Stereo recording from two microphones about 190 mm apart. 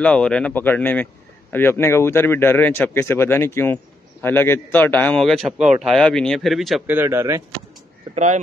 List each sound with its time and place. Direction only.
0.0 s speech: 5° left (ahead or behind)
7.0 s speech: 15° right (ahead or behind)
8.1 s speech: 40° right (ahead or behind)